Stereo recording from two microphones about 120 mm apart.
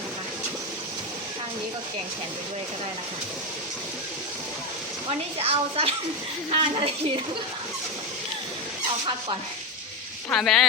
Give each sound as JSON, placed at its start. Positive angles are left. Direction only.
{"t": 5.4, "sound": "a woman's voice", "side_deg": -55}
{"t": 10.3, "sound": "speech", "side_deg": 5}